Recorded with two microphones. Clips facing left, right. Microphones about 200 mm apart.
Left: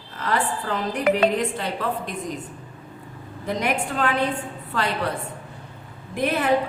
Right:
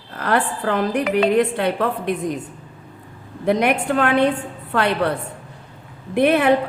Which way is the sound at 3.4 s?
65° right (ahead or behind).